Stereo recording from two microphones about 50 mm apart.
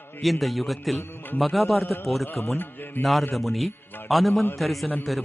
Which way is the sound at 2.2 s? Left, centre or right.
Left.